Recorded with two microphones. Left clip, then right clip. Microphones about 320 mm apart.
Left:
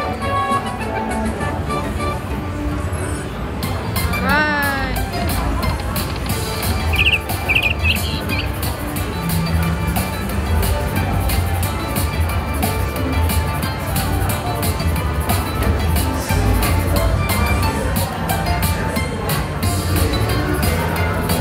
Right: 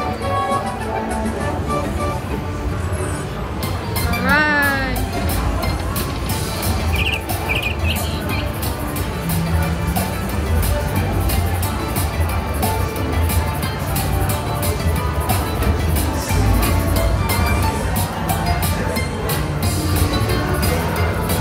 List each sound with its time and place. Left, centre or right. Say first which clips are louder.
4.3 s music: right 2 dB; centre
7.0 s insect: left 7 dB; centre